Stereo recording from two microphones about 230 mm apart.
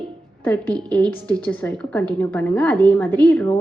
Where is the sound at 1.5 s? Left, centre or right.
Centre.